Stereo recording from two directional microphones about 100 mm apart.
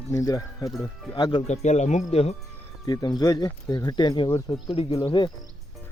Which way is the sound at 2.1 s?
90° left.